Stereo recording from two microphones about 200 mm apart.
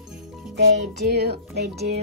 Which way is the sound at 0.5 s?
60° right (ahead or behind).